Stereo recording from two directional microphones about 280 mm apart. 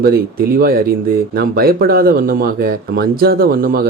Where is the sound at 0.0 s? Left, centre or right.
Right.